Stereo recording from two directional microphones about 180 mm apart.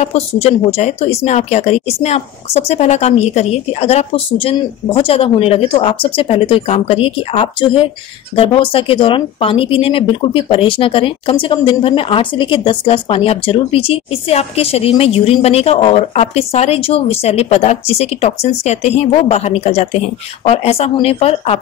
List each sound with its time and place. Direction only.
0.0 s speech: 35° left (ahead or behind)